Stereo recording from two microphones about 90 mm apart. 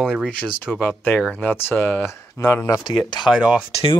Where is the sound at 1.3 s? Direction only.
20° left (ahead or behind).